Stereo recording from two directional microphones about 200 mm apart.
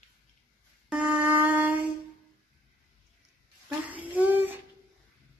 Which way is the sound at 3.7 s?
10° right (ahead or behind).